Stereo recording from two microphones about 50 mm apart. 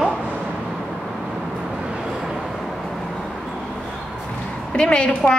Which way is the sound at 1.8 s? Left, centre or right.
Centre.